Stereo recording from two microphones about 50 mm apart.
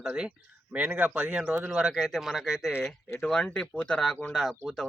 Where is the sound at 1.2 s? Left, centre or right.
Right.